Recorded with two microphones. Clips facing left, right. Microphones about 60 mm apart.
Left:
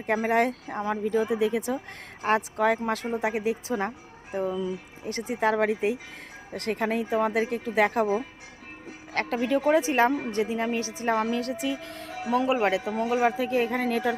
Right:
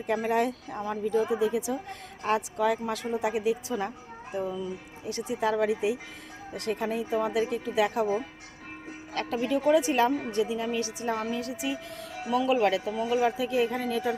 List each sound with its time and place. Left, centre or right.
0.0 s speech: left
4.4 s speech: left
5.0 s a woman's voice: left
7.3 s speech: left
9.1 s speech: left
9.7 s a woman's voice: left
11.0 s speech: left
12.5 s a woman's voice: left
12.9 s speech: left
13.3 s speech: left